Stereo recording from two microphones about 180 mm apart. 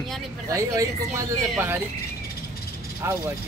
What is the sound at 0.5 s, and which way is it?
Speech, 20° right (ahead or behind).